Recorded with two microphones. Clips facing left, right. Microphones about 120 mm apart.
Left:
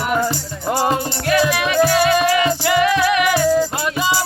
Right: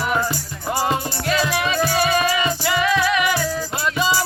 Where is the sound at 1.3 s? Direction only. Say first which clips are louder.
Left 4 dB; 70° left (ahead or behind).